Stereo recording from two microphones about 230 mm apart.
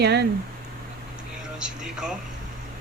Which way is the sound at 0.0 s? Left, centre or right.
Right.